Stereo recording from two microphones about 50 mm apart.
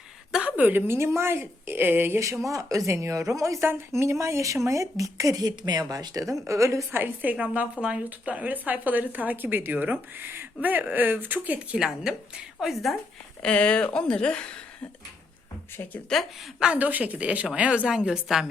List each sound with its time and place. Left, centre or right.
0.3 s a sound: centre
0.5 s speech: right
0.9 s a woman's voice: right
2.1 s speech: right
3.7 s speech: right
5.6 s a woman's voice: right
6.4 s speech: right
6.9 s speech: right
7.3 s speech: right
12.5 s a woman's voice: centre
13.4 s speech: left
16.1 s a woman's voice: centre
16.7 s a woman's voice: right; by 18.4 s centre